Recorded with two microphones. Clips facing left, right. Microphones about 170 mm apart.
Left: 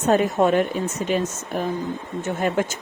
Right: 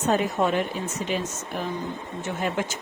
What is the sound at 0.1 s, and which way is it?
Speech, 45° left (ahead or behind).